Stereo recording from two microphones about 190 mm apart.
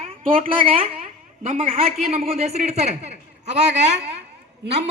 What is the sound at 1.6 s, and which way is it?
A man's voice, 30° right (ahead or behind).